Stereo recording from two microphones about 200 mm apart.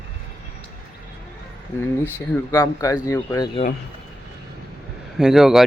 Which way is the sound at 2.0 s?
10° left (ahead or behind).